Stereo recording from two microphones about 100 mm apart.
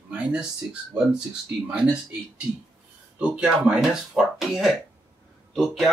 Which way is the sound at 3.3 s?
10° right (ahead or behind).